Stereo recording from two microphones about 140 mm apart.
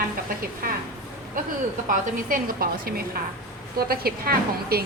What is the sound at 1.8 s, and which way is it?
A woman's voice, 85° right.